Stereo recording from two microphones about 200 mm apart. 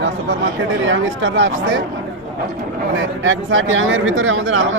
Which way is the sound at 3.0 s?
70° right (ahead or behind).